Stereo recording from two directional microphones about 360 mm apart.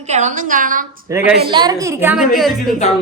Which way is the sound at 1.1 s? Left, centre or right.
Centre.